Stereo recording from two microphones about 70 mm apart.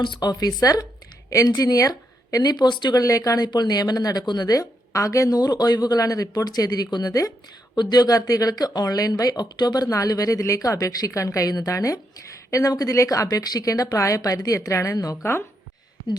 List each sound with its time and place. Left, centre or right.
0.0 s a woman's voice: left
2.4 s speech: left
3.0 s speech: left
7.8 s speech: left
15.2 s speech: left